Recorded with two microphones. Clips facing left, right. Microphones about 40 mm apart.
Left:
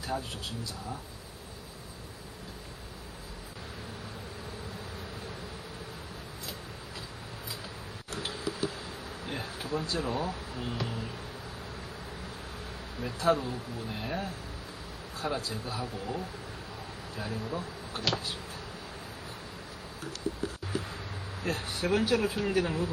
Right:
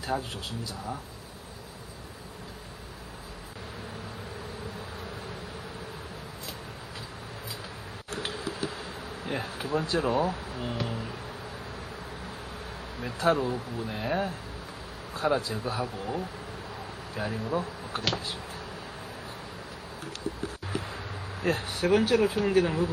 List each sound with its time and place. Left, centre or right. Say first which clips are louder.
0.1 s speech: right 4 dB; right
8.1 s tick-tock: right 2 dB; right
9.2 s speech: right 5 dB; right
13.0 s speech: right 2 dB; right
20.7 s a sound: right 3 dB; right
21.4 s speech: right 5 dB; right